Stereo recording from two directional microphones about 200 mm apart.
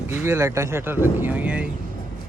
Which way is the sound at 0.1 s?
15° right (ahead or behind).